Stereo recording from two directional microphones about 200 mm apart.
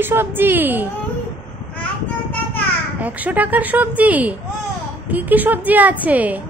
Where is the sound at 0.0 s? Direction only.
10° right (ahead or behind).